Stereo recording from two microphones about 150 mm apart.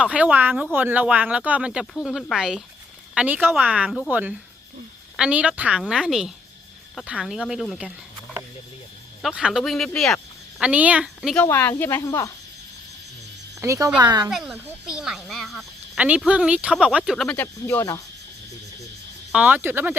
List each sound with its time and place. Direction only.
0.0 s speech: 10° right (ahead or behind)
9.2 s speech: 5° right (ahead or behind)
10.6 s speech: 10° right (ahead or behind)
11.4 s speech: 15° left (ahead or behind)
13.6 s speech: 20° right (ahead or behind)
14.3 s speech: centre (ahead or behind)
17.3 s speech: 15° left (ahead or behind)
19.3 s speech: 10° right (ahead or behind)